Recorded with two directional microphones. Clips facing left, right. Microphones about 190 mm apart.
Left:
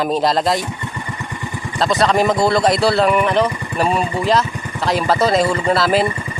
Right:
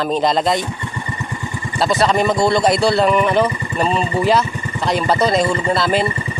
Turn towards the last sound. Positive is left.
turn(degrees=5)  # may be behind; listen again after turning